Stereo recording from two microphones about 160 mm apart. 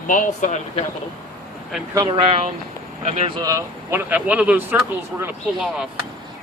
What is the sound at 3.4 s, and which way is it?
Speech, 20° right (ahead or behind).